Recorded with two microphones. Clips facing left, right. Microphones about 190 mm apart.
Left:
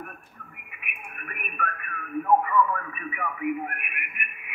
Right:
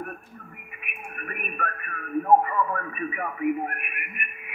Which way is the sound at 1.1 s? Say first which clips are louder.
Right 4 dB; 35° right (ahead or behind).